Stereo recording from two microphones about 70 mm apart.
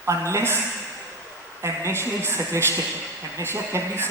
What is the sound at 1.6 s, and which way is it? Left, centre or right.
Speech, right.